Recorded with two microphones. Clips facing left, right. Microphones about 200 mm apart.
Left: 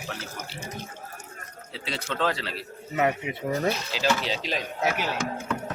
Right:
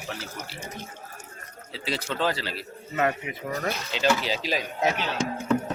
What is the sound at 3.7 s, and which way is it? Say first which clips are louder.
Speech: right 1 dB; centre (ahead or behind).